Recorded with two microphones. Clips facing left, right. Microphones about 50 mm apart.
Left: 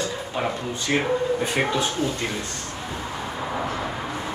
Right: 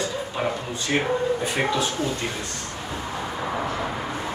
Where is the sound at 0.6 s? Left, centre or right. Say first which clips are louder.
Left 1 dB; left.